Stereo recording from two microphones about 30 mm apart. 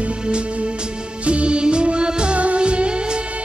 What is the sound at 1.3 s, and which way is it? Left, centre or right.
Music, right.